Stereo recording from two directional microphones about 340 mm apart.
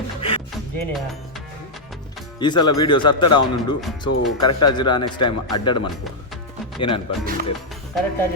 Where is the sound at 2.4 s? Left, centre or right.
Centre.